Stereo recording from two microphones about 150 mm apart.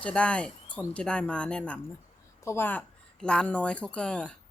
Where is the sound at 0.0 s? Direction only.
5° left (ahead or behind).